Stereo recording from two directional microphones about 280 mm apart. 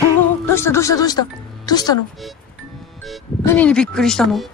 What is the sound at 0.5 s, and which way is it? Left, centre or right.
Speech, centre.